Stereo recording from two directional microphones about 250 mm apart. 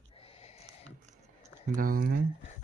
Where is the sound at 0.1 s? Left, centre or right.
Left.